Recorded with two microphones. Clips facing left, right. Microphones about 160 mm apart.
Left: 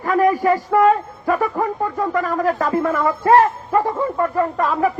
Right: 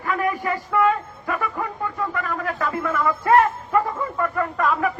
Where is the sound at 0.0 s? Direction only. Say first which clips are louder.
Left 8 dB; 40° left (ahead or behind).